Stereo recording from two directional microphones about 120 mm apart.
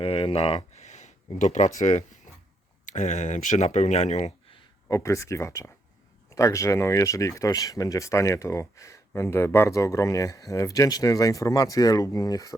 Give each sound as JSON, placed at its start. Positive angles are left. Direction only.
{"t": 0.0, "sound": "speech", "side_deg": 50}
{"t": 0.8, "sound": "a sound", "side_deg": 75}
{"t": 1.4, "sound": "speech", "side_deg": 85}
{"t": 4.9, "sound": "speech", "side_deg": 25}